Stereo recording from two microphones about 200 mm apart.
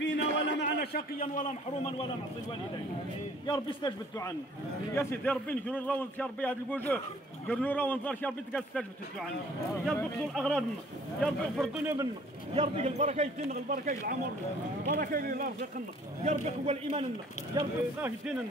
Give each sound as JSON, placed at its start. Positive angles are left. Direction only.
{"t": 0.0, "sound": "a sound", "side_deg": 55}
{"t": 3.4, "sound": "a man's voice", "side_deg": 20}
{"t": 4.9, "sound": "a man's voice", "side_deg": 10}
{"t": 9.9, "sound": "speech", "side_deg": 5}
{"t": 11.8, "sound": "a man's voice", "side_deg": -10}
{"t": 12.5, "sound": "a man's voice", "side_deg": -30}
{"t": 13.7, "sound": "speech", "side_deg": -45}
{"t": 16.3, "sound": "a man's voice", "side_deg": -30}
{"t": 18.0, "sound": "speech", "side_deg": -5}